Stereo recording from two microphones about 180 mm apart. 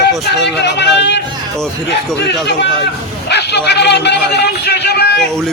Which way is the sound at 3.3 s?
65° left (ahead or behind).